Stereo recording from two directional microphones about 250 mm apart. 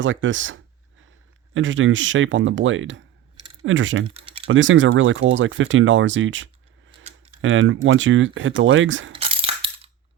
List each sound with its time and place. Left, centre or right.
0.0 s speech: right
4.0 s typing: right
4.4 s speech: right
9.1 s a sound: right